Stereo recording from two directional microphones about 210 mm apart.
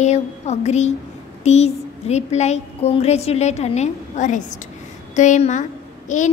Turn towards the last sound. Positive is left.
turn(degrees=35)  # may be behind; listen again after turning